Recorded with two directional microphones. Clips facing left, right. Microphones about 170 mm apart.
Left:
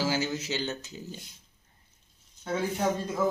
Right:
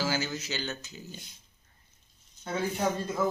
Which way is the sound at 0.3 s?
25° left (ahead or behind).